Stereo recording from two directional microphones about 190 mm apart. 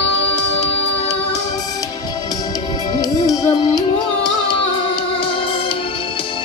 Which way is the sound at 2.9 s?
20° left (ahead or behind).